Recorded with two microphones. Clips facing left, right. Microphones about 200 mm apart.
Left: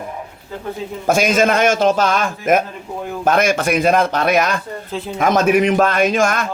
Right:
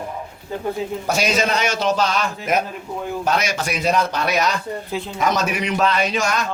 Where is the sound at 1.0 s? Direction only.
50° left (ahead or behind).